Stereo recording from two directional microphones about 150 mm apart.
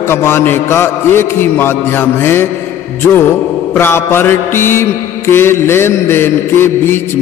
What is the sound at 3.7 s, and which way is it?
A man's voice, 15° left (ahead or behind).